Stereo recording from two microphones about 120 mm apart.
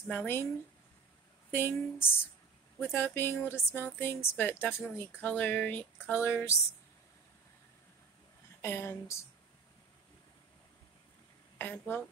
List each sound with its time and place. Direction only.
0.1 s speech: 15° left (ahead or behind)
1.5 s speech: 20° left (ahead or behind)
8.5 s speech: 20° left (ahead or behind)
11.5 s speech: 15° left (ahead or behind)